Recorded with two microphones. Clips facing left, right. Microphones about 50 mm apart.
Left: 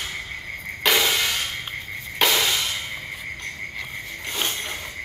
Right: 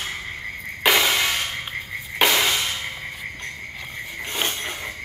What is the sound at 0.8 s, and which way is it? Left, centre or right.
Music, centre.